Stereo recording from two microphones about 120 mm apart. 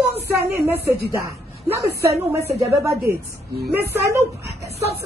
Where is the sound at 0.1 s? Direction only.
20° right (ahead or behind).